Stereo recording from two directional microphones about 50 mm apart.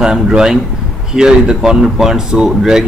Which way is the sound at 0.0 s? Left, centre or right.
Centre.